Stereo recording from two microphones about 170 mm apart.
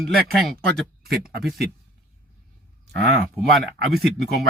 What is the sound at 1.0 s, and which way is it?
Speech, 65° right (ahead or behind).